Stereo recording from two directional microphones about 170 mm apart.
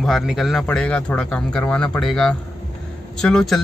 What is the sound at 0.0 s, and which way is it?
Speech, centre (ahead or behind).